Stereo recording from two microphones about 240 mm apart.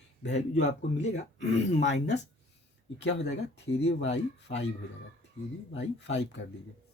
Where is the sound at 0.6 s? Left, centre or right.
Left.